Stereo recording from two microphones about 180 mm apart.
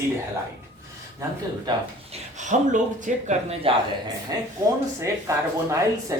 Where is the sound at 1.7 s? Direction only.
25° right (ahead or behind).